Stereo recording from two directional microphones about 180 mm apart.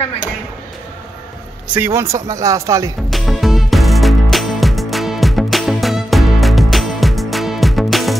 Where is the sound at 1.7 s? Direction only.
15° right (ahead or behind).